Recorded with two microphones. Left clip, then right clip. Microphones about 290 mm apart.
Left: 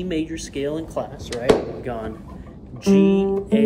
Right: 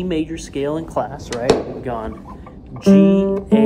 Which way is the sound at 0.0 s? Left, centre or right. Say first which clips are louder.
Right 3 dB; centre.